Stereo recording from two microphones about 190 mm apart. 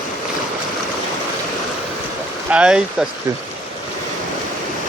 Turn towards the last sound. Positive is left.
turn(degrees=-5)  # may be behind; listen again after turning